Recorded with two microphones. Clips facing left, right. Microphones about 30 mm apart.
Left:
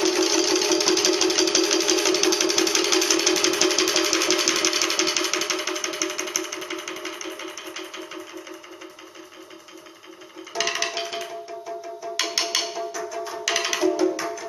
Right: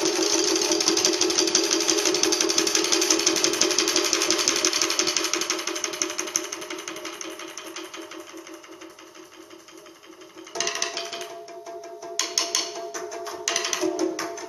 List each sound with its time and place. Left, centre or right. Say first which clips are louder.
0.0 s music: left 2 dB; centre
10.5 s music: left 3 dB; centre
12.2 s music: left 2 dB; left; by 14.4 s centre